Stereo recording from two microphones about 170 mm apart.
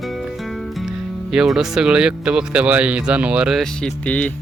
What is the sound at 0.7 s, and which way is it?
Speech, 5° right (ahead or behind).